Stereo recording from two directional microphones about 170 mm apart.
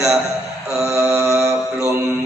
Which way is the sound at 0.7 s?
15° right (ahead or behind).